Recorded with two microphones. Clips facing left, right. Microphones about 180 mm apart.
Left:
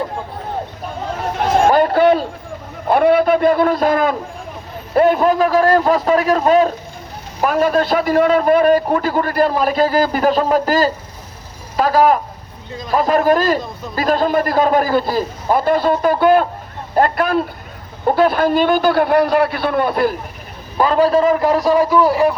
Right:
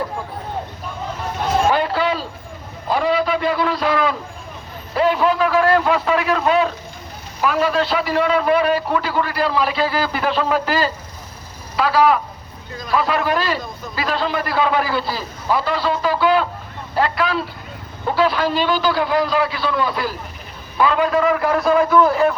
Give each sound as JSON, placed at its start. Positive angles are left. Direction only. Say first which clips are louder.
{"t": 1.6, "sound": "a sound", "louder": "left 9 dB", "side_deg": 50}
{"t": 2.8, "sound": "a man's voice", "louder": "left 6 dB", "side_deg": 55}
{"t": 20.7, "sound": "a man's voice", "louder": "left 4 dB", "side_deg": 40}
{"t": 21.8, "sound": "a man's voice", "louder": "left 1 dB", "side_deg": 15}